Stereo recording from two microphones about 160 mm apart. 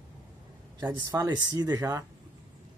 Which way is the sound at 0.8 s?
25° right (ahead or behind).